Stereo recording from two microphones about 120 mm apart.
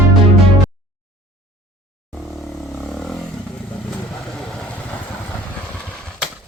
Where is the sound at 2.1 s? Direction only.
Centre (ahead or behind).